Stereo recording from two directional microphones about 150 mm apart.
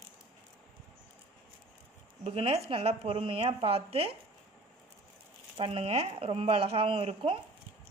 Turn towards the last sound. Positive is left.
turn(degrees=-40)  # may be behind; listen again after turning